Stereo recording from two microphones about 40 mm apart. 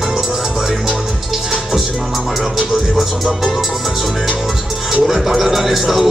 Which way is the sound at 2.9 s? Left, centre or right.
Centre.